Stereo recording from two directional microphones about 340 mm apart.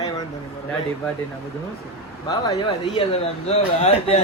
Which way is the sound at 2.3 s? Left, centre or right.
Centre.